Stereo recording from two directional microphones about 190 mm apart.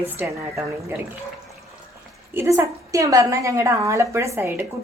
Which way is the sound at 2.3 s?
15° right (ahead or behind).